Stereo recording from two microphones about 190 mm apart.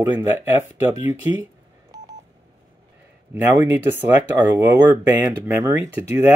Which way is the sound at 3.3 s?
10° right (ahead or behind).